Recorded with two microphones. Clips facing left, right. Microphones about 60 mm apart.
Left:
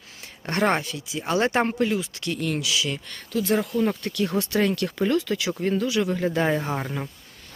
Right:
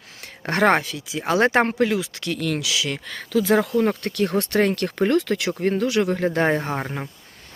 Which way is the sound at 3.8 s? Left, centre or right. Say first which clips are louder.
Right 3 dB; right.